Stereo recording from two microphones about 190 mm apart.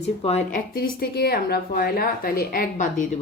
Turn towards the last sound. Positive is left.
turn(degrees=45)  # may be behind; listen again after turning